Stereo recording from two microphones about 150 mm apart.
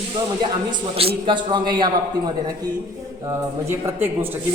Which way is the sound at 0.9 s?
35° right (ahead or behind).